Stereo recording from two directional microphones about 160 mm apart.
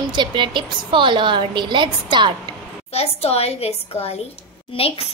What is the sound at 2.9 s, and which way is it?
Speech, 40° left (ahead or behind).